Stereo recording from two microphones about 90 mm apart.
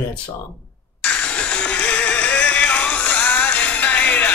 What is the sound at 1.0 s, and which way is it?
Music, 15° left (ahead or behind).